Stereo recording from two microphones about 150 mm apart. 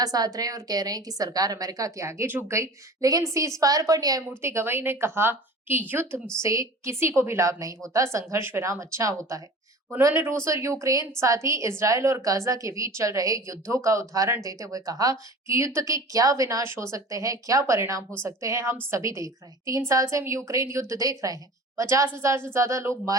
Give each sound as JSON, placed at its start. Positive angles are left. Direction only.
{"t": 0.0, "sound": "a woman's voice", "side_deg": -25}